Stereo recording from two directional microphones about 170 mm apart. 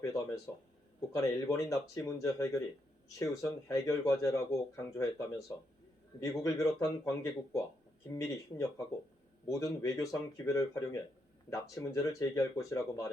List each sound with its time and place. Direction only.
0.0 s speech: 20° left (ahead or behind)
9.5 s speech: 20° left (ahead or behind)